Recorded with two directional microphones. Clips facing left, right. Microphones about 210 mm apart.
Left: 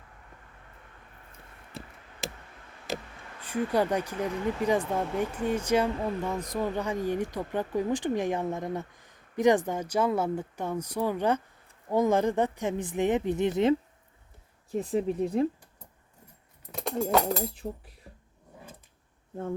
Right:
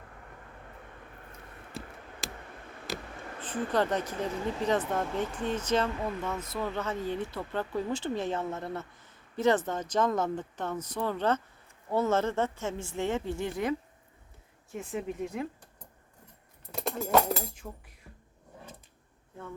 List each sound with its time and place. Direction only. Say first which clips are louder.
3.4 s speech: left 2 dB; 10° left (ahead or behind)
14.7 s speech: left 7 dB; 35° left (ahead or behind)
16.7 s speech: left 1 dB; centre (ahead or behind)
17.5 s speech: left 7 dB; 35° left (ahead or behind)